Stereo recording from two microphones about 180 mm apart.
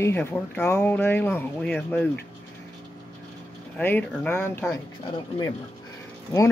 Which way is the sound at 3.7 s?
10° left (ahead or behind).